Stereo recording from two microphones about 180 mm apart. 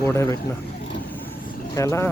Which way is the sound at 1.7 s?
15° left (ahead or behind).